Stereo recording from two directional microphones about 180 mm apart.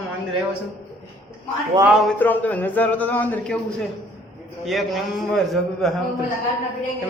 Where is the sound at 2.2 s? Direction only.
10° left (ahead or behind).